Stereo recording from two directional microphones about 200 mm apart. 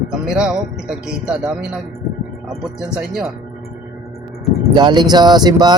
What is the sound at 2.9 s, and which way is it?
Speech, centre (ahead or behind).